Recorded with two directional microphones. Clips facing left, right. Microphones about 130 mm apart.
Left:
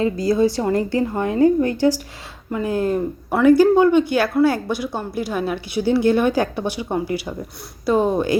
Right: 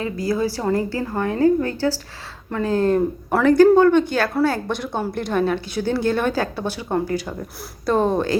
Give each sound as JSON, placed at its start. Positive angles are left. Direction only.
{"t": 0.0, "sound": "a woman's voice", "side_deg": 25}
{"t": 7.9, "sound": "a woman's voice", "side_deg": 10}